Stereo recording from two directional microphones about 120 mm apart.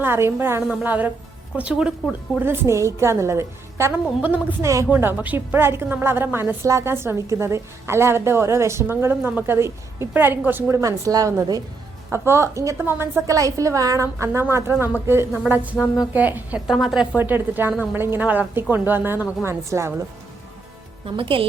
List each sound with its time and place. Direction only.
0.0 s a woman's voice: 20° right (ahead or behind)
4.6 s a woman's voice: 25° right (ahead or behind)
16.6 s a woman's voice: centre (ahead or behind)
17.2 s a woman's voice: 15° right (ahead or behind)
21.2 s a woman's voice: 50° right (ahead or behind)